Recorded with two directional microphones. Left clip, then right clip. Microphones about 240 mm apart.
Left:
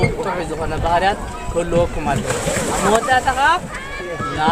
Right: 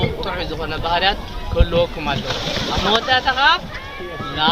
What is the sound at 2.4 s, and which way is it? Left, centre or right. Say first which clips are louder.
Speech: left 1 dB; left.